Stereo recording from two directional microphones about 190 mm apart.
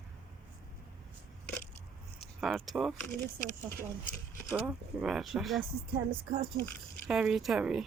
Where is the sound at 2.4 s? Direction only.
Centre (ahead or behind).